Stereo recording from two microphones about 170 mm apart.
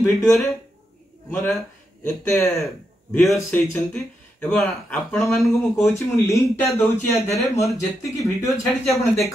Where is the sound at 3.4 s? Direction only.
10° left (ahead or behind).